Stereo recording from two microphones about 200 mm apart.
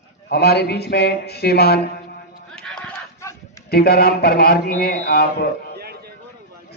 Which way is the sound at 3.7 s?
50° left (ahead or behind).